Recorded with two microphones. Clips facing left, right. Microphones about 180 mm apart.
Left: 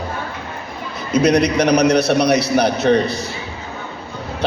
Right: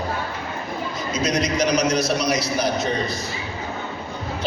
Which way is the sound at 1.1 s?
65° left (ahead or behind).